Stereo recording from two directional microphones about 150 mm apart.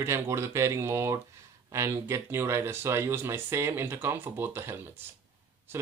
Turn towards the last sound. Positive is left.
turn(degrees=-15)  # may be behind; listen again after turning